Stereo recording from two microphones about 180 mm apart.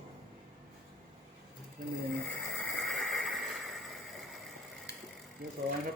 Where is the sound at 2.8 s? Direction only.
Centre (ahead or behind).